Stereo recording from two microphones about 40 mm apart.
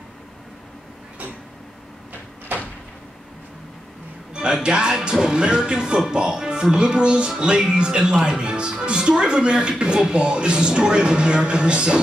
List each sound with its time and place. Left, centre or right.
4.3 s music: right
4.6 s speech: right